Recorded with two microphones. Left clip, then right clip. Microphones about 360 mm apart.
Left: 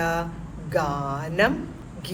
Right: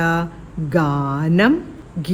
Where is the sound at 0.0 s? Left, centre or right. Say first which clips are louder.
Right 5 dB; right.